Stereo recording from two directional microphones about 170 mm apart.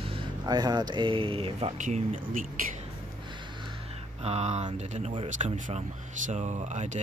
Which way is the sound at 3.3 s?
30° right (ahead or behind).